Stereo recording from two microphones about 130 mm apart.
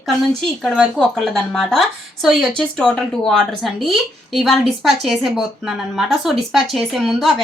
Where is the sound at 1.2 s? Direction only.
Centre (ahead or behind).